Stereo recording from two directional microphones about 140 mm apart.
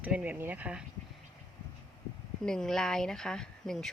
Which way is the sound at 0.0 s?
10° right (ahead or behind).